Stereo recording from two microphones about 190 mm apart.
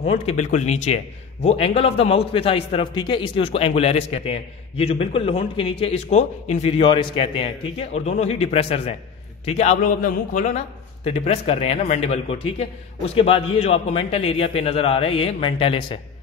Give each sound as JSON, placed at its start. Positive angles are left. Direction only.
{"t": 0.0, "sound": "a man's voice", "side_deg": 30}